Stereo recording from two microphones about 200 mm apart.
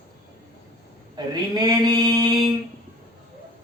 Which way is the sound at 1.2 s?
20° right (ahead or behind).